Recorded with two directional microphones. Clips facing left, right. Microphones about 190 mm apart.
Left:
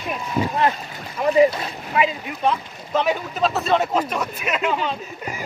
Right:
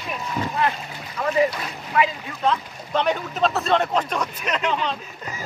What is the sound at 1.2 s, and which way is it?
Speech, 20° left (ahead or behind).